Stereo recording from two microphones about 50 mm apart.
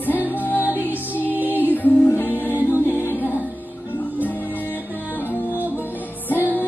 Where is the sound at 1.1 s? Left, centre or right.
Left.